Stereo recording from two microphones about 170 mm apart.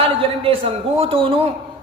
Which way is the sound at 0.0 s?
35° right (ahead or behind).